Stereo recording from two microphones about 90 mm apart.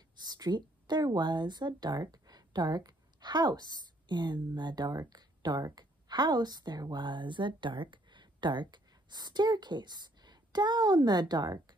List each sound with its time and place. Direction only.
0.2 s speech: 50° right (ahead or behind)